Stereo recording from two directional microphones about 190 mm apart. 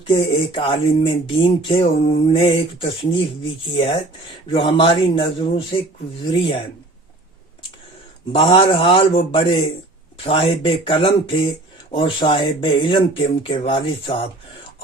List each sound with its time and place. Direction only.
0.1 s speech: 30° left (ahead or behind)
8.3 s speech: 30° left (ahead or behind)